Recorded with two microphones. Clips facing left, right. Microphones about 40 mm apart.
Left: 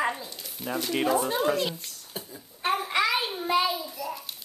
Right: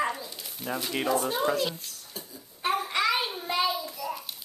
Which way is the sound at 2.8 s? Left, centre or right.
Centre.